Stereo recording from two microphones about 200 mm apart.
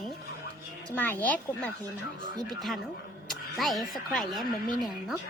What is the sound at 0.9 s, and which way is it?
Speech, 10° left (ahead or behind).